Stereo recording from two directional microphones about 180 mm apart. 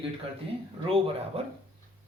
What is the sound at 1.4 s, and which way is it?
Speech, 35° right (ahead or behind).